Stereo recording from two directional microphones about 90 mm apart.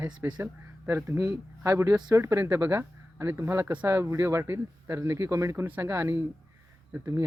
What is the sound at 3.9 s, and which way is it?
Speech, 30° right (ahead or behind).